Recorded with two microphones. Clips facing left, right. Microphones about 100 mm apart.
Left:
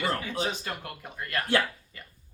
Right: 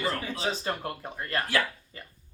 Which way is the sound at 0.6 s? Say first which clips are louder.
Right 5 dB; 30° right (ahead or behind).